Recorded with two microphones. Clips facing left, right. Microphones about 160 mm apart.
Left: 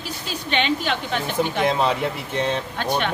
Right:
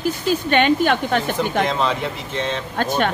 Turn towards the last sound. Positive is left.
turn(degrees=-45)  # may be behind; listen again after turning